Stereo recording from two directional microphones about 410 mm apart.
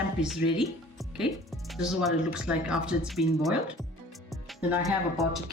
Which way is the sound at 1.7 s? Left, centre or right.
Centre.